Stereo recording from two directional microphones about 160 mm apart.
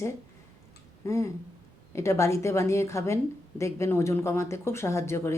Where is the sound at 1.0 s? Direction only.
20° left (ahead or behind).